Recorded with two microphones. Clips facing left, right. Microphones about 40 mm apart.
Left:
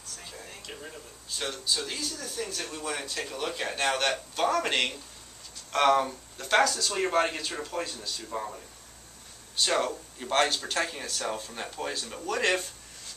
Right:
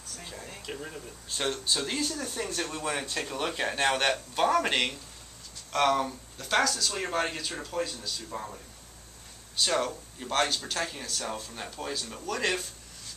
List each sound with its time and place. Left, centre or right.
0.5 s speech: centre
1.4 s speech: right
3.3 s speech: centre
5.7 s speech: centre
9.6 s speech: centre